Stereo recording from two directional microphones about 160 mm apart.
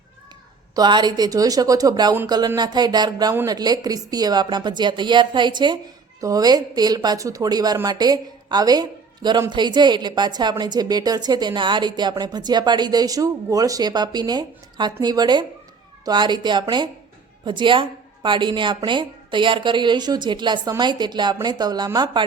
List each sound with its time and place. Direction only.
0.8 s a woman's voice: 25° right (ahead or behind)